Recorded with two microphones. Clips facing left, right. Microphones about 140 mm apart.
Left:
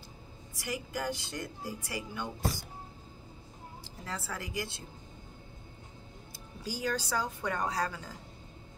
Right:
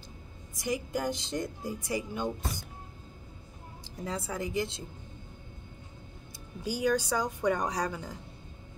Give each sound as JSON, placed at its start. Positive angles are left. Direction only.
{"t": 0.7, "sound": "speech", "side_deg": -20}
{"t": 4.0, "sound": "speech", "side_deg": -20}
{"t": 6.7, "sound": "a woman's voice", "side_deg": -15}